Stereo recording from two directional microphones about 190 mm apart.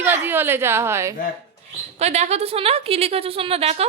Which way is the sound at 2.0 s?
35° right (ahead or behind).